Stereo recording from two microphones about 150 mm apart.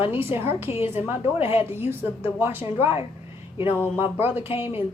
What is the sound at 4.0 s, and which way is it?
Speech, 15° right (ahead or behind).